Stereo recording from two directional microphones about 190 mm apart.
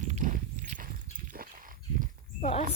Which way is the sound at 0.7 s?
45° right (ahead or behind).